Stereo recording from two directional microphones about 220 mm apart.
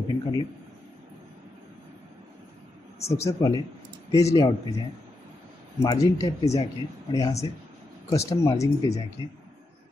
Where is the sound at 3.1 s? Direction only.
15° left (ahead or behind).